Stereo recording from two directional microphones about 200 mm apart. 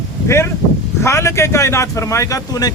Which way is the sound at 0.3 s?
15° left (ahead or behind).